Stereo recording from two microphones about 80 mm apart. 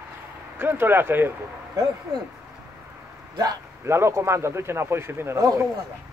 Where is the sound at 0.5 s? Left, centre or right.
Right.